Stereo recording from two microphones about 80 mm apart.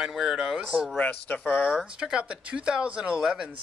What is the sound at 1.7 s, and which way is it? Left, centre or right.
Speech, centre.